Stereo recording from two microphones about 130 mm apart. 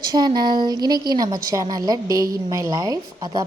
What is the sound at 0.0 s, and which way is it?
A woman's voice, 30° right (ahead or behind).